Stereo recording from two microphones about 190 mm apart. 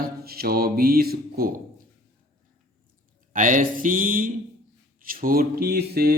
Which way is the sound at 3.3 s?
40° right (ahead or behind).